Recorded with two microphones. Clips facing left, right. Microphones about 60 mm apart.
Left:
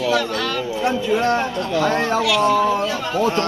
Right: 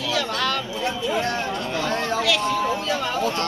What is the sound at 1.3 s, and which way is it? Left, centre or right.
Speech, left.